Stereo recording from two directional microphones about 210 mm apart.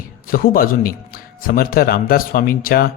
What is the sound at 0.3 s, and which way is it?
A man's voice, 45° left (ahead or behind).